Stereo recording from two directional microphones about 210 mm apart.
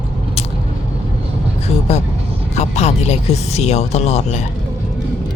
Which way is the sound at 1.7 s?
30° left (ahead or behind).